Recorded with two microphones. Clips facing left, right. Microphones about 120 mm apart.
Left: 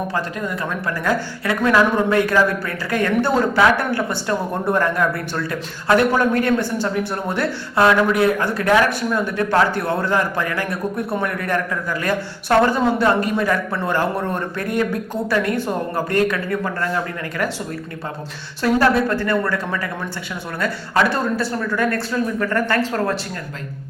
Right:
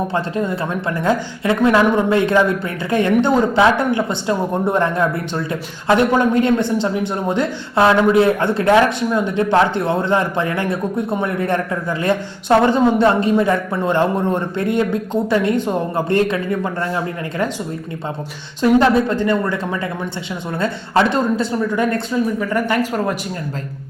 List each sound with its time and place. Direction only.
0.1 s a woman's voice: 30° right (ahead or behind)
18.6 s a woman's voice: 20° right (ahead or behind)